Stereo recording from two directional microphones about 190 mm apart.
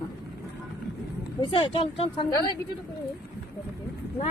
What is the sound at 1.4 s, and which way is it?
Speech, 30° left (ahead or behind).